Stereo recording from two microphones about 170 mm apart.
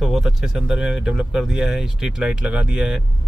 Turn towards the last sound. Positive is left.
turn(degrees=-5)  # may be behind; listen again after turning